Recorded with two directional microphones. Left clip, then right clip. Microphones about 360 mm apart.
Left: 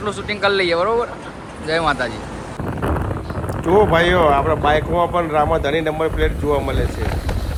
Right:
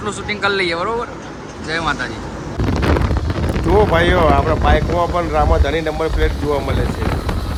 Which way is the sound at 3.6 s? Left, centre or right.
Centre.